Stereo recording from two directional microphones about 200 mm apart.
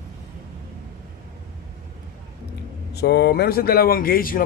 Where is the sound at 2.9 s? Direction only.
55° left (ahead or behind).